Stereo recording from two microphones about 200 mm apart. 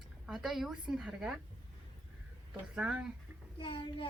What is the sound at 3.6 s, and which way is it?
Speech, 25° left (ahead or behind).